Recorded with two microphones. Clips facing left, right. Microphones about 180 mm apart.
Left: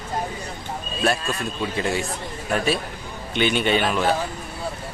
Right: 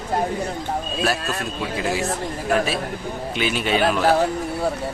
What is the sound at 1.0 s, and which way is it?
A man's voice, 5° right (ahead or behind).